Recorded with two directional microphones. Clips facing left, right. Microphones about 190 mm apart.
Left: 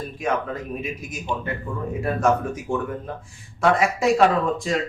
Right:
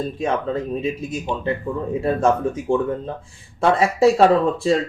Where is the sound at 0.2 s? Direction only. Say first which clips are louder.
Right 1 dB; 30° right (ahead or behind).